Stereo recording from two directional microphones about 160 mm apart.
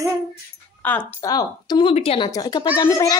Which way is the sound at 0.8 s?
10° left (ahead or behind).